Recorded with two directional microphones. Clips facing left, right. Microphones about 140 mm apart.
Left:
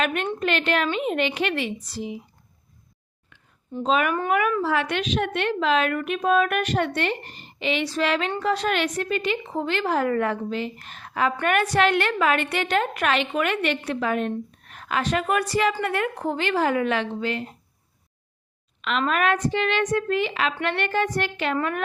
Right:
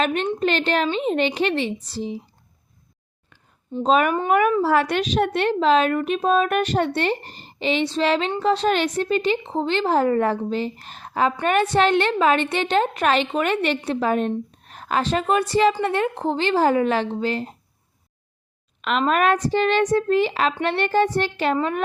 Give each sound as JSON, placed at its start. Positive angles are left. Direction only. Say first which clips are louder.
{"t": 0.0, "sound": "a woman's voice", "louder": "right 3 dB", "side_deg": -30}
{"t": 3.8, "sound": "a woman's voice", "louder": "right 4 dB", "side_deg": -40}
{"t": 18.8, "sound": "a woman's voice", "louder": "right 4 dB", "side_deg": -40}